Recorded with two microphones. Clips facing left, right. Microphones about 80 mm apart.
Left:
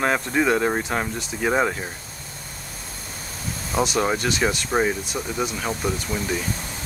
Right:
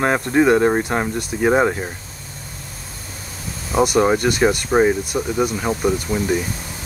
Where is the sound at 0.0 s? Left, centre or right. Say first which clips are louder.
Right 5 dB; right.